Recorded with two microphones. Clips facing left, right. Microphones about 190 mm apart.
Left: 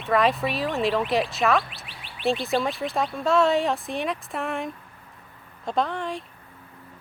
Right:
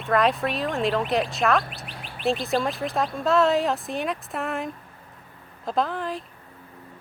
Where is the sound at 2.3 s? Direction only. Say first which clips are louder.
Even; centre (ahead or behind).